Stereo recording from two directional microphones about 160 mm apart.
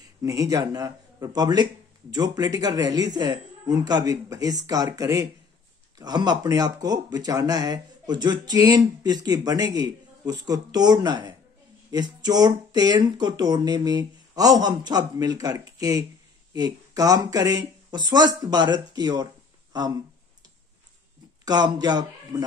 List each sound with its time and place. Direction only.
0.2 s speech: 20° right (ahead or behind)
21.5 s speech: 25° right (ahead or behind)